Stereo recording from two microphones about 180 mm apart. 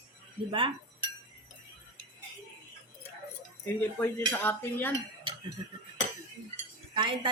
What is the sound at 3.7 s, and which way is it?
Speech, 10° left (ahead or behind).